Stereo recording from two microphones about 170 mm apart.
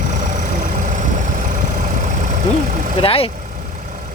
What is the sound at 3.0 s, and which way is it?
Speech, 35° left (ahead or behind).